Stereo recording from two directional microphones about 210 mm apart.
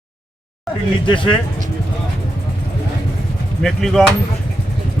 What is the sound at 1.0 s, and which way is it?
Speech, 25° left (ahead or behind).